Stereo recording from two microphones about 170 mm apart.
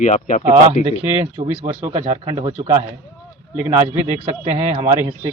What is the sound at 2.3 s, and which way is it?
Speech, 40° right (ahead or behind).